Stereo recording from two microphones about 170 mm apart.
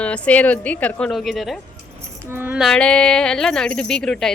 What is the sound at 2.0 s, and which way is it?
Speech, 15° right (ahead or behind).